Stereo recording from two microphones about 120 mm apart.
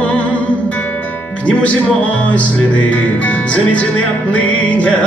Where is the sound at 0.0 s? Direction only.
10° left (ahead or behind).